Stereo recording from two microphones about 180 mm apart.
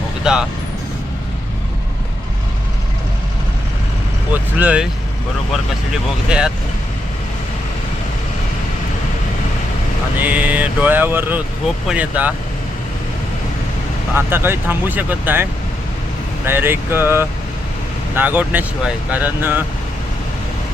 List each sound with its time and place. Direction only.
0.3 s speech: 5° right (ahead or behind)
4.5 s speech: 5° right (ahead or behind)
6.2 s speech: 5° right (ahead or behind)
10.2 s speech: 10° right (ahead or behind)
14.2 s speech: 10° right (ahead or behind)
16.5 s speech: 15° right (ahead or behind)